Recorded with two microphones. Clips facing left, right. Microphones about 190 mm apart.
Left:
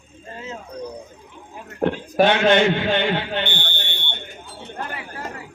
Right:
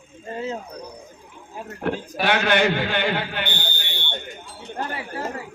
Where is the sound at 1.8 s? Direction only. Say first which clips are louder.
Left 3 dB; 20° left (ahead or behind).